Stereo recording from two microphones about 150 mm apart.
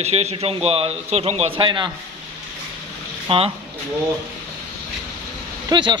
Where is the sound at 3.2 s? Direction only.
40° right (ahead or behind).